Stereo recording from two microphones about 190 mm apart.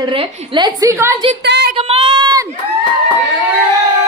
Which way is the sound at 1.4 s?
65° right (ahead or behind).